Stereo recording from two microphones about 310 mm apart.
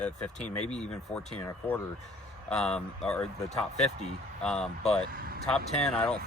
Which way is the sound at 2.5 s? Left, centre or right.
Centre.